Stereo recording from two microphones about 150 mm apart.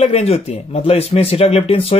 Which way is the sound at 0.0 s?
45° left (ahead or behind).